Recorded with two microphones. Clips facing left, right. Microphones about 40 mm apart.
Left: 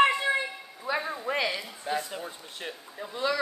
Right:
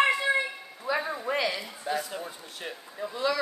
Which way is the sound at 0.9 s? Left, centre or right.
Left.